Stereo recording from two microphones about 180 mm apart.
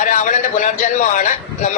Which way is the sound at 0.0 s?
45° left (ahead or behind).